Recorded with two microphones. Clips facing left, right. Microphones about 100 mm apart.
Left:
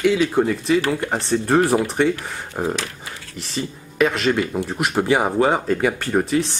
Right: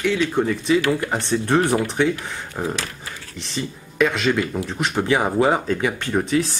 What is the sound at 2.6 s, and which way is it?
Speech, 20° left (ahead or behind).